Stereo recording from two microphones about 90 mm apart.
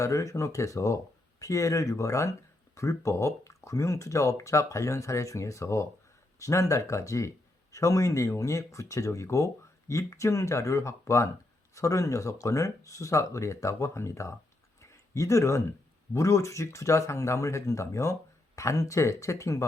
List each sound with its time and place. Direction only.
0.0 s speech: 35° left (ahead or behind)
14.8 s a sound: 35° left (ahead or behind)
16.1 s speech: 35° left (ahead or behind)